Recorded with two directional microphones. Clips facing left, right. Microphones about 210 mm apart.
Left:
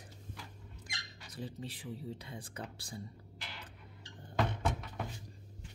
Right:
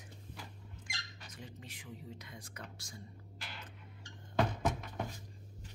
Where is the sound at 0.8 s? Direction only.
35° left (ahead or behind).